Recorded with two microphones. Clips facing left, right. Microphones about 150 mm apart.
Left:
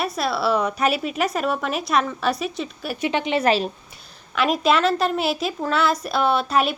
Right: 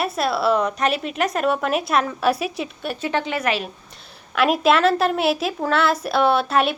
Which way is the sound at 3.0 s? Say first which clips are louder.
Left 3 dB; 20° left (ahead or behind).